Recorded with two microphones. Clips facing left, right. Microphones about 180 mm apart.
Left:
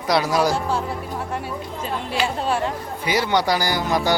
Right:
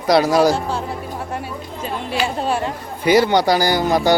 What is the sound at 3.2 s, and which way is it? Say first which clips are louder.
Speech: right 5 dB; 35° right (ahead or behind).